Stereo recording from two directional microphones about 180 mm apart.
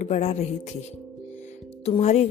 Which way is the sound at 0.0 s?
40° left (ahead or behind).